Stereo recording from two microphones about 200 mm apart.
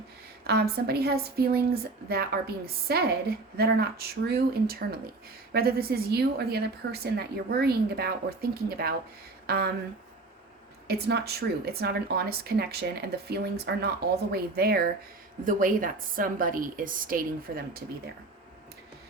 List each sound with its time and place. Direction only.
0.4 s a woman's voice: 50° right (ahead or behind)
10.8 s a woman's voice: 55° right (ahead or behind)